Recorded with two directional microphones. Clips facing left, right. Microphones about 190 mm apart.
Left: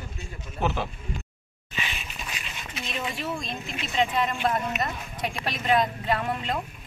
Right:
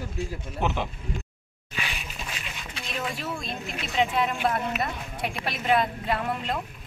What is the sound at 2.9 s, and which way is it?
Speech, centre (ahead or behind).